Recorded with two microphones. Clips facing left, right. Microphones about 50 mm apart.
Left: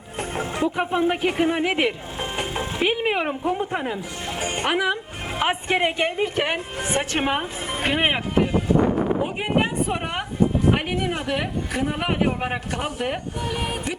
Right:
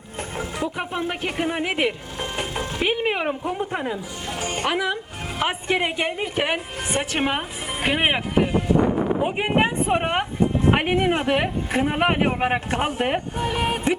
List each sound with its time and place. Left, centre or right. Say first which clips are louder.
0.2 s music: left 3 dB; left
0.8 s speech: left 5 dB; centre
2.1 s vehicle: left 1 dB; centre
2.8 s speech: even; centre
4.3 s speech: even; left
5.4 s speech: left 1 dB; centre
9.2 s speech: right 2 dB; right